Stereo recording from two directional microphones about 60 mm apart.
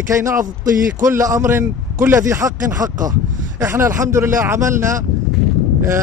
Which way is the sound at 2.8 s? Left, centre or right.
Right.